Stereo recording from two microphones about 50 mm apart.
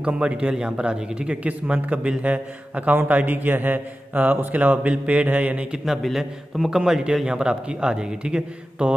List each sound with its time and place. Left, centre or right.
0.0 s a man's voice: right
1.4 s a man's voice: right
5.9 s a man's voice: centre
6.8 s speech: centre